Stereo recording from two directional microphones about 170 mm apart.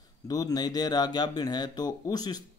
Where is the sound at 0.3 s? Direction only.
20° left (ahead or behind).